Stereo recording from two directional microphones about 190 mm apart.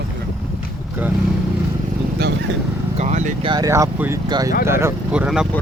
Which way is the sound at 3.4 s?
20° right (ahead or behind).